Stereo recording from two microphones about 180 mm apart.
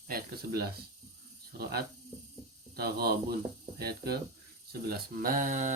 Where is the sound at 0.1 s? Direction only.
55° right (ahead or behind).